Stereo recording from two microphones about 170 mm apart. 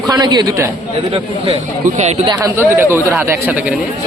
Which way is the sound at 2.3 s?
15° right (ahead or behind).